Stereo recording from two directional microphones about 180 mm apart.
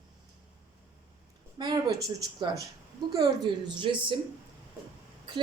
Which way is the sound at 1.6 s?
25° right (ahead or behind).